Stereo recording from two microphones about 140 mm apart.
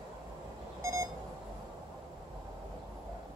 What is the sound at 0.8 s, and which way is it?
Beep, 20° right (ahead or behind).